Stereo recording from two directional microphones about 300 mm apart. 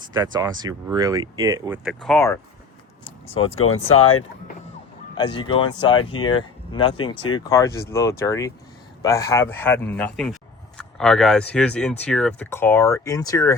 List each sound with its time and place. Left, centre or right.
0.1 s speech: centre
3.0 s vehicle: centre
5.1 s a man's voice: centre